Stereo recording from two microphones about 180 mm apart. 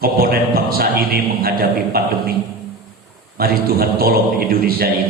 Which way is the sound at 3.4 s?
60° right (ahead or behind).